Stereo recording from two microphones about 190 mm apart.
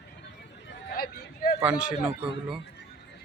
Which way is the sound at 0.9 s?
50° left (ahead or behind).